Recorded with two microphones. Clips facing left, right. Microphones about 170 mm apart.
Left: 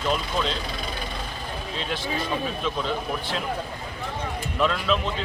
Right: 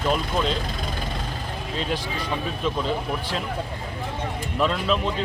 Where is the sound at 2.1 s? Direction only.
Centre (ahead or behind).